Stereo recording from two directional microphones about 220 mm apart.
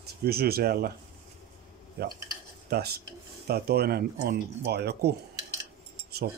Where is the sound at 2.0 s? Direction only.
45° right (ahead or behind).